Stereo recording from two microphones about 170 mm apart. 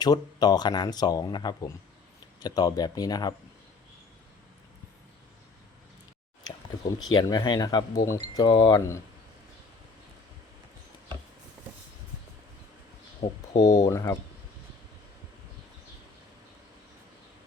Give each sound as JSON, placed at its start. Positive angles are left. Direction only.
{"t": 0.0, "sound": "speech", "side_deg": 25}
{"t": 7.1, "sound": "speech", "side_deg": 25}
{"t": 13.2, "sound": "speech", "side_deg": 30}
{"t": 13.7, "sound": "speech", "side_deg": 20}